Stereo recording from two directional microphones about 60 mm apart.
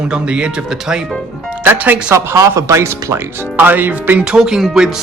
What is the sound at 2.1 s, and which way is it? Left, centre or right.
Speech, right.